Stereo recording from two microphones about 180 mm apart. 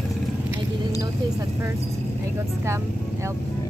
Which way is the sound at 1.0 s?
15° right (ahead or behind).